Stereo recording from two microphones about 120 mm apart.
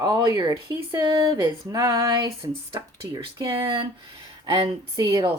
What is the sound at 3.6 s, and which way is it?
Speech, 40° right (ahead or behind).